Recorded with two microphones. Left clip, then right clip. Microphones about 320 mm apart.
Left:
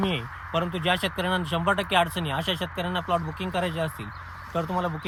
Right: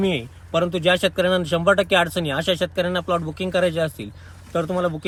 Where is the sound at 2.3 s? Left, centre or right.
Left.